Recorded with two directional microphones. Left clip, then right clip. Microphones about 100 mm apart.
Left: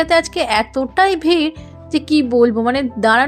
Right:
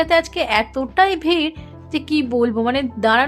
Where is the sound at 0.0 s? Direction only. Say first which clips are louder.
Left 2 dB; 30° left (ahead or behind).